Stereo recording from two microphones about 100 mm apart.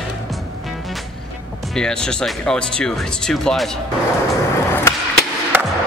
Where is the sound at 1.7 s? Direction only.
5° left (ahead or behind).